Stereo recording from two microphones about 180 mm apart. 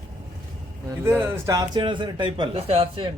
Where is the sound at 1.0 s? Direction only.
10° right (ahead or behind).